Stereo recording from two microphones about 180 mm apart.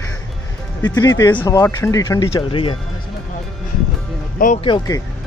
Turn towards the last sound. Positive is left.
turn(degrees=25)  # may be behind; listen again after turning